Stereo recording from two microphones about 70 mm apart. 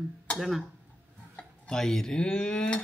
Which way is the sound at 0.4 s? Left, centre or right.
Centre.